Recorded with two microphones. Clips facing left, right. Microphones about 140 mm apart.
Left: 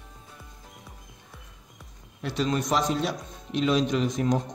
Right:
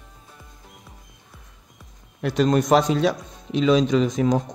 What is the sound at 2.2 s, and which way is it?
Speech, 50° right (ahead or behind).